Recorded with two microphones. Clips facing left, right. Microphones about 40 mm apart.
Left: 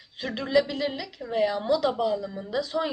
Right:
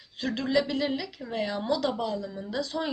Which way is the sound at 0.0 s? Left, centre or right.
Centre.